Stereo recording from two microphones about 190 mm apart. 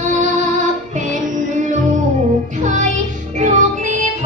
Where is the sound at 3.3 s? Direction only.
40° right (ahead or behind).